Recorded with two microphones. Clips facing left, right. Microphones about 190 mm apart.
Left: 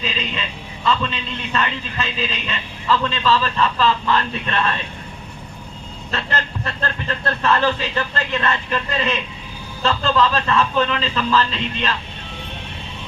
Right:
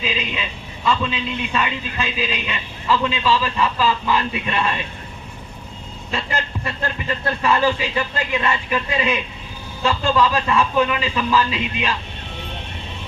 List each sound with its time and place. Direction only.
0.0 s a sound: 10° right (ahead or behind)
0.9 s a man's voice: 10° right (ahead or behind)
6.1 s a man's voice: 10° right (ahead or behind)